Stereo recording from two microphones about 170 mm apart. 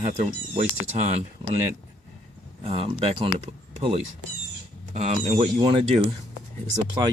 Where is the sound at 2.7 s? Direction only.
35° right (ahead or behind).